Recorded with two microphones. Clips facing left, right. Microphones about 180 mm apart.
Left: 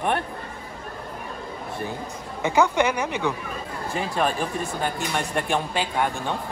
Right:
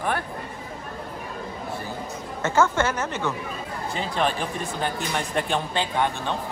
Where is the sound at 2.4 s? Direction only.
15° left (ahead or behind).